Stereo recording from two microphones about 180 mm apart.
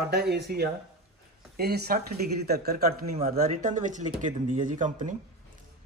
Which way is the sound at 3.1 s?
35° right (ahead or behind).